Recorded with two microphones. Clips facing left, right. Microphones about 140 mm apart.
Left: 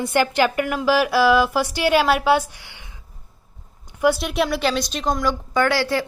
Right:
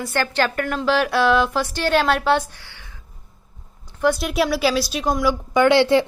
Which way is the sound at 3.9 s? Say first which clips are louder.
Left 1 dB; 10° left (ahead or behind).